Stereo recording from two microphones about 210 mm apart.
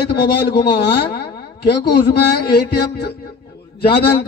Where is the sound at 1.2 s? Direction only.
50° left (ahead or behind).